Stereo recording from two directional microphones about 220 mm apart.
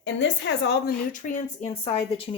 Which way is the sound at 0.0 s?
55° left (ahead or behind).